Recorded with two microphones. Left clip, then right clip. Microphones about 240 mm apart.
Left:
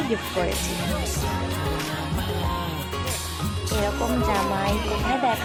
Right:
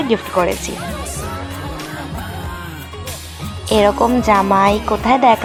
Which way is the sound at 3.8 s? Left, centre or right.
Right.